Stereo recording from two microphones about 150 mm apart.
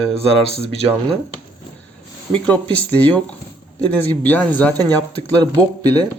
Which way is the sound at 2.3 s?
10° left (ahead or behind).